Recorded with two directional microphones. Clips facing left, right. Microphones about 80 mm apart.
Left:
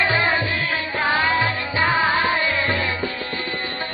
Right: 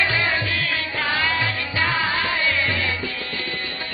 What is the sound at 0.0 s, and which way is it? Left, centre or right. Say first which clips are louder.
Music: left 2 dB; left.